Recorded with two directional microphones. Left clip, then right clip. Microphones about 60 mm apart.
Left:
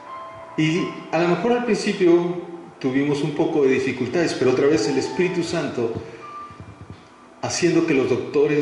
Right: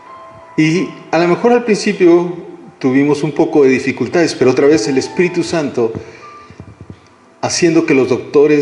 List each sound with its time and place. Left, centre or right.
0.6 s speech: right
7.3 s speech: right